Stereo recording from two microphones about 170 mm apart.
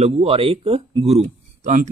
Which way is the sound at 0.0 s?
35° right (ahead or behind).